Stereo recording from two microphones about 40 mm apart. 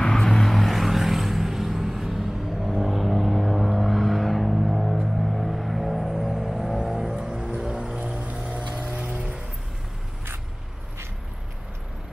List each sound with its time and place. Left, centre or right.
0.0 s vehicle: centre
5.2 s music: centre
7.5 s vehicle: right